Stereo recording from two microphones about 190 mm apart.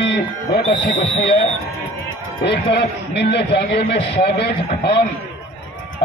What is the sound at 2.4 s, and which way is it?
A man's voice, 60° left (ahead or behind).